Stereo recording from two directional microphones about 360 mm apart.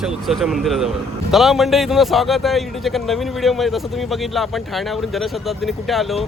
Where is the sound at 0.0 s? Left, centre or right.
Centre.